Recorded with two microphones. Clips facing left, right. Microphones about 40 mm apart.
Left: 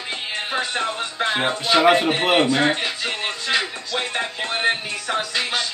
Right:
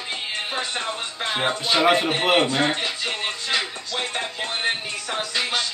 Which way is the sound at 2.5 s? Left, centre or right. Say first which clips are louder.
Left 2 dB; centre.